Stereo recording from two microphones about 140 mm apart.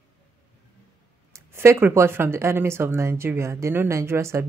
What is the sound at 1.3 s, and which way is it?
Speech, 20° right (ahead or behind).